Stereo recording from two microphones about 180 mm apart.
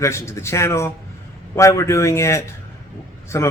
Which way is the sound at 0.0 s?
15° left (ahead or behind).